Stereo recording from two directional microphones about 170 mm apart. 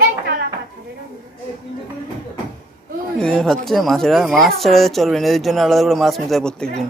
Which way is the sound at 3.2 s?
5° left (ahead or behind).